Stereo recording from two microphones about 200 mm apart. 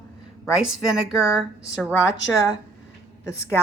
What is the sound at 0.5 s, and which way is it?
Speech, 5° right (ahead or behind).